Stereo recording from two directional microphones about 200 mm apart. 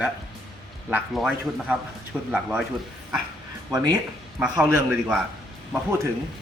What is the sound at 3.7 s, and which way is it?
Speech, 20° right (ahead or behind).